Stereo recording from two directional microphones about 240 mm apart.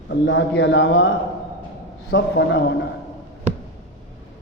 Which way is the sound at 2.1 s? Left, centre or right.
Left.